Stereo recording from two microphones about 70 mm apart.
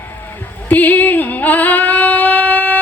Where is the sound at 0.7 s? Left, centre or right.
Left.